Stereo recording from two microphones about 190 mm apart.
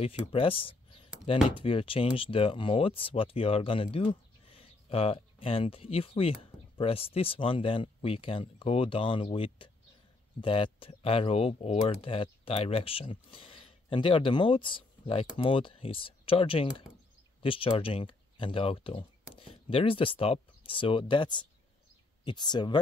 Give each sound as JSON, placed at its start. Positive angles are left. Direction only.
{"t": 0.3, "sound": "speech", "side_deg": 30}